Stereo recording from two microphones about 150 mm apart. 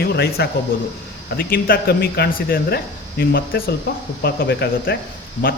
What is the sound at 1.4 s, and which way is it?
Speech, 75° left (ahead or behind).